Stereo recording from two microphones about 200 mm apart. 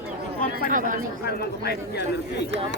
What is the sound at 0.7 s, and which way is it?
Speech, 40° right (ahead or behind).